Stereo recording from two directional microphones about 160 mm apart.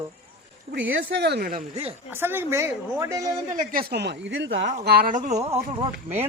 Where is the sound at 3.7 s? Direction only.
70° right (ahead or behind); by 4.3 s 90° right.